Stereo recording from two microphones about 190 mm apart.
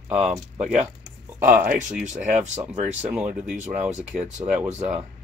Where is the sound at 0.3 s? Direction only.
35° right (ahead or behind).